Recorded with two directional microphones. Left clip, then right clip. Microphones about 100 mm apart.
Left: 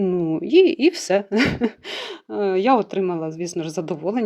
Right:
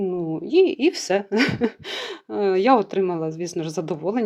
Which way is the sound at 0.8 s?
20° left (ahead or behind).